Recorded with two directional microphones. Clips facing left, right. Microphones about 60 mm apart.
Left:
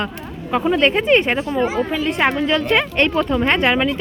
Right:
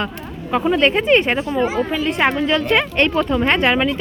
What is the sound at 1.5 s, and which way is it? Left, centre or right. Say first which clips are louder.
Speech: even; centre.